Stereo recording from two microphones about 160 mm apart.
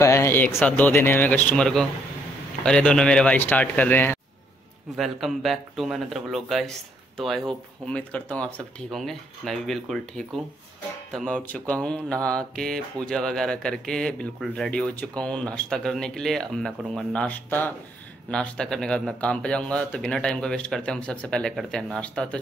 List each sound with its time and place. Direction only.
0.0 s speech: 15° left (ahead or behind)
4.9 s speech: centre (ahead or behind)